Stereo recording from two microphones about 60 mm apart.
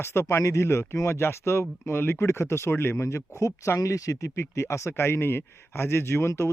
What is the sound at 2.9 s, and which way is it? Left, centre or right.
Speech, left.